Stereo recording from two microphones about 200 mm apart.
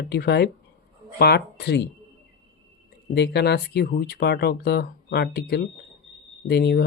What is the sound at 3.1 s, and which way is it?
Speech, 55° left (ahead or behind).